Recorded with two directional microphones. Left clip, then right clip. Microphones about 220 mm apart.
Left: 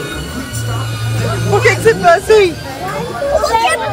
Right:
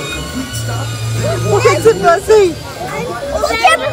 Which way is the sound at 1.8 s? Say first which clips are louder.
Even; 10° right (ahead or behind).